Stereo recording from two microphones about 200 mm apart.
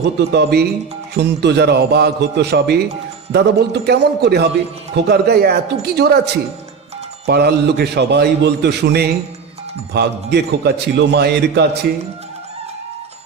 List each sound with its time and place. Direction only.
0.0 s a man's voice: 55° right (ahead or behind)